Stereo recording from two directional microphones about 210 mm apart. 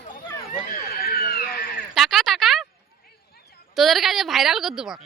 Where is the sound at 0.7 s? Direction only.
45° left (ahead or behind).